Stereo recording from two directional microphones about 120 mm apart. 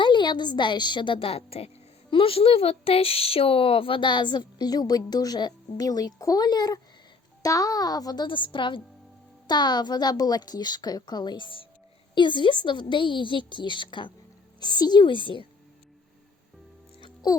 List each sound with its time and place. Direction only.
0.0 s a woman's voice: 40° left (ahead or behind)